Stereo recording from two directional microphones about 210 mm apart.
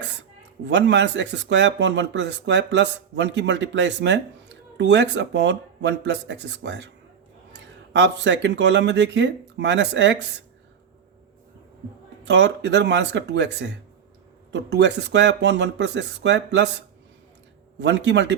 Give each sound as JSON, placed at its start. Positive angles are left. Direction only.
{"t": 0.0, "sound": "speech", "side_deg": -55}
{"t": 7.9, "sound": "speech", "side_deg": -55}
{"t": 12.2, "sound": "speech", "side_deg": -55}